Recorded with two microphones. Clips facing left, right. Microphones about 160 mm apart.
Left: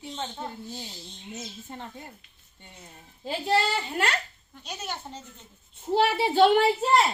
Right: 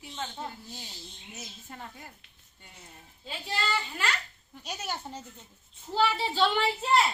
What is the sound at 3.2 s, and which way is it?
Speech, 70° left (ahead or behind).